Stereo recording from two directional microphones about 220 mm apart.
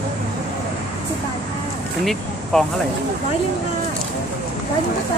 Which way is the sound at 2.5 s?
5° left (ahead or behind).